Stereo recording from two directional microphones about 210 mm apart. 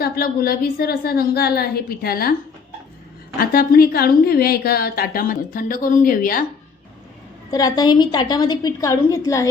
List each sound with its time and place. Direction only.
0.0 s a woman's voice: 45° left (ahead or behind)
3.4 s a woman's voice: 45° left (ahead or behind)
7.5 s a woman's voice: 20° left (ahead or behind)